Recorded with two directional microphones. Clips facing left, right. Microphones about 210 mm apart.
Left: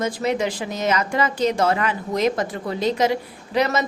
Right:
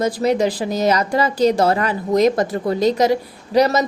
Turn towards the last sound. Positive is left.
turn(degrees=-40)  # may be behind; listen again after turning